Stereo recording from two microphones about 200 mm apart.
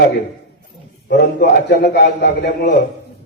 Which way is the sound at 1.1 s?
50° left (ahead or behind).